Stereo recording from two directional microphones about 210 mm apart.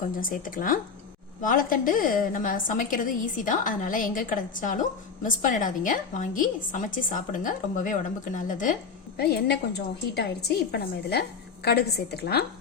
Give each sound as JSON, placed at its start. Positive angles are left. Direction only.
{"t": 0.2, "sound": "a woman's voice", "side_deg": 40}
{"t": 9.1, "sound": "a woman's voice", "side_deg": 50}